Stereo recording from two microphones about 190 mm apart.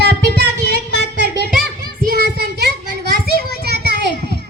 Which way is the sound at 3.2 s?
55° right (ahead or behind).